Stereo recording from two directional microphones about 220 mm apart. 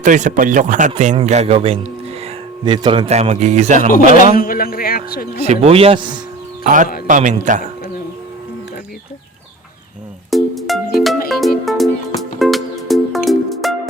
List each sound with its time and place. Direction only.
0.0 s a man's voice: 35° right (ahead or behind)
3.8 s a man's voice: 40° left (ahead or behind)
5.4 s a man's voice: 25° right (ahead or behind)
7.1 s speech: 35° right (ahead or behind)
10.3 s music: centre (ahead or behind)